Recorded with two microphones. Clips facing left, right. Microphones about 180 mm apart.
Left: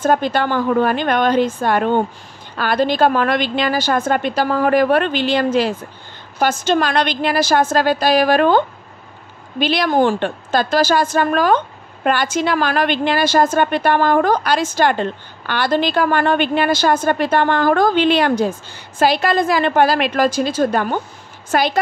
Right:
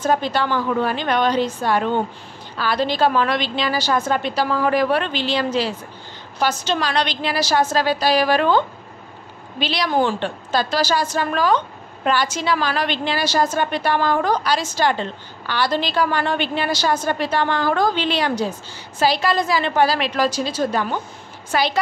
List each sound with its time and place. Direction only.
0.0 s a woman's voice: 50° left (ahead or behind)